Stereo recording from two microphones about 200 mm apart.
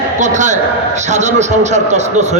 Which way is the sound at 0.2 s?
35° right (ahead or behind).